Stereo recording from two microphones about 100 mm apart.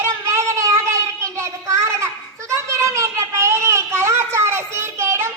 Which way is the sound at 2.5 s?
30° right (ahead or behind).